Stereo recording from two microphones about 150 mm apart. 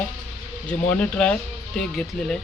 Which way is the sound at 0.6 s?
5° left (ahead or behind).